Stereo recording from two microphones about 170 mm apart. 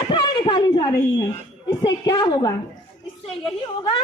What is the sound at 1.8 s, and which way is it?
A man's voice, 25° left (ahead or behind).